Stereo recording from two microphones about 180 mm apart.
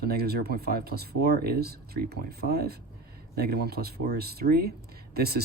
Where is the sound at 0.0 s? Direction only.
60° right (ahead or behind).